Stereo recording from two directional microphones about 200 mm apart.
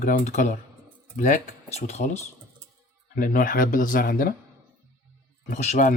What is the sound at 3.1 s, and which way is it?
Speech, 45° left (ahead or behind).